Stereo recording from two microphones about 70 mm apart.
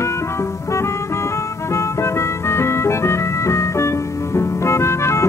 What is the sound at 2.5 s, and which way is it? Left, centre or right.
Music, left.